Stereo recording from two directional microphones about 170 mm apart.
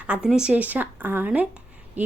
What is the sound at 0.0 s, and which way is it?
A woman's voice, 5° right (ahead or behind).